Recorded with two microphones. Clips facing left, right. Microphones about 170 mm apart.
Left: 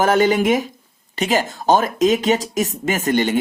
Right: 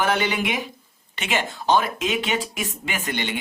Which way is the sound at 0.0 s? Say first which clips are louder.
Left 8 dB; 45° left (ahead or behind).